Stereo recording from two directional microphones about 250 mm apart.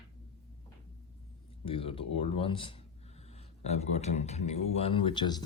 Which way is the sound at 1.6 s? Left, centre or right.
Left.